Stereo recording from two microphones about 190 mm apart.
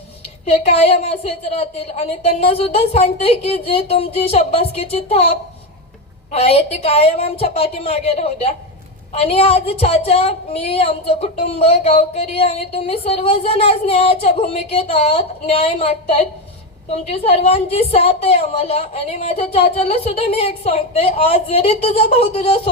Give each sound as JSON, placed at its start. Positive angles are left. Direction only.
{"t": 0.6, "sound": "a woman's voice", "side_deg": 35}